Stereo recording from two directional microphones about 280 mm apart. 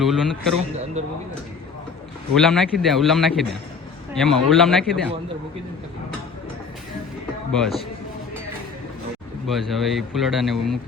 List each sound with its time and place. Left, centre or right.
0.0 s speech: centre
1.0 s speech: right
2.3 s speech: centre
7.5 s speech: centre
9.5 s speech: centre